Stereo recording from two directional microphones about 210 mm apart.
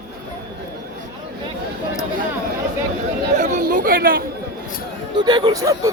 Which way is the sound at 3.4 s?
35° right (ahead or behind).